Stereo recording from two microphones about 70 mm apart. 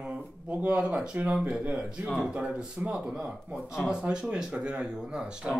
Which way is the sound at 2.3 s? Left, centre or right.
Centre.